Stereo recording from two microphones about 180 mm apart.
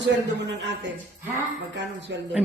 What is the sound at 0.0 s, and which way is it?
A man's voice, 85° right.